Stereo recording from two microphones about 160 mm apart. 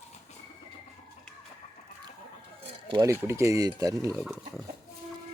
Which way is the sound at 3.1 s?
15° right (ahead or behind).